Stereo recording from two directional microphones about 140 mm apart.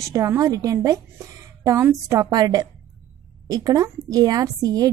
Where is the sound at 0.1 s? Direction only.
20° right (ahead or behind).